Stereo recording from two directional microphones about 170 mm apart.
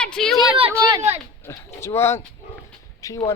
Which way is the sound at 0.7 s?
20° right (ahead or behind).